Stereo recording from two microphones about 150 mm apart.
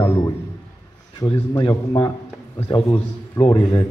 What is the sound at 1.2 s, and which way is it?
A man's voice, 30° left (ahead or behind).